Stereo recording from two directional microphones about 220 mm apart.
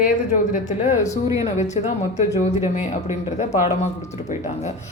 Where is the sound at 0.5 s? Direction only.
35° left (ahead or behind).